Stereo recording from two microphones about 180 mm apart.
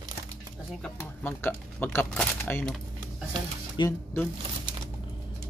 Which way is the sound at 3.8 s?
15° left (ahead or behind).